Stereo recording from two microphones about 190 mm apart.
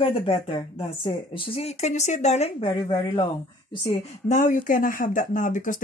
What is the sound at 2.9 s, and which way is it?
Speech, 25° left (ahead or behind).